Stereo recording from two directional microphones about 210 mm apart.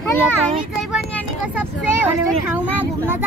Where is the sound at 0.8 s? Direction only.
5° right (ahead or behind).